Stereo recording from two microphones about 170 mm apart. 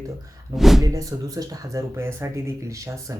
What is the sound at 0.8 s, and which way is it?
Speech, 20° right (ahead or behind).